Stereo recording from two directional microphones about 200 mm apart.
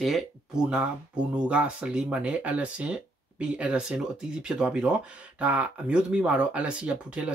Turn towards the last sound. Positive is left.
turn(degrees=-5)  # may be behind; listen again after turning